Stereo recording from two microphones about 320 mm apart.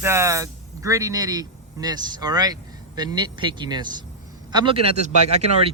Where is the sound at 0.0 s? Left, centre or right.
Centre.